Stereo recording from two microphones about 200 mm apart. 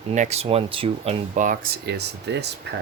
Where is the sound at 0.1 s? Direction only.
35° right (ahead or behind); by 2.5 s 55° right (ahead or behind).